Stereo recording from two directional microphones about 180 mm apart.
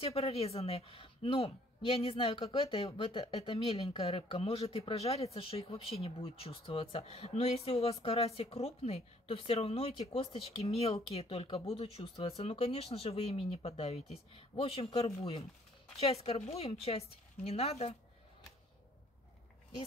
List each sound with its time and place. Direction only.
0.0 s a woman's voice: 35° left (ahead or behind)